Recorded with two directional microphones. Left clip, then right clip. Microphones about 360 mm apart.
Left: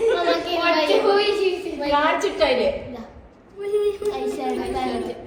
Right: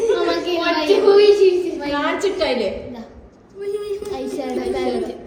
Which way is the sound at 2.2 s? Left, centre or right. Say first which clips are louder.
Even; centre.